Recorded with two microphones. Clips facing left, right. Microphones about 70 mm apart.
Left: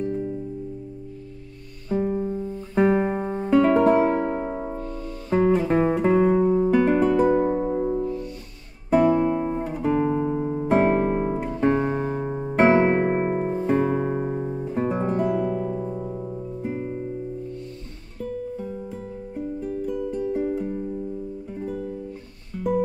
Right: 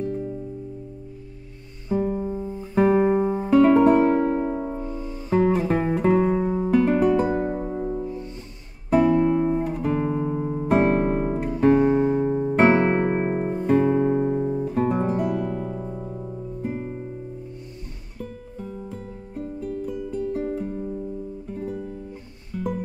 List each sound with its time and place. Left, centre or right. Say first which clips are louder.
2.0 s music: left 1 dB; centre
2.2 s music: left 1 dB; centre
2.8 s music: right 2 dB; centre
4.0 s music: right 2 dB; centre
4.7 s music: right 1 dB; centre
5.3 s music: left 1 dB; centre
7.4 s music: left 4 dB; centre
8.0 s music: left 3 dB; right
8.9 s guitar: even; centre
11.3 s music: right 3 dB; centre
19.3 s music: left 1 dB; centre
19.9 s music: left 3 dB; centre
20.2 s music: even; centre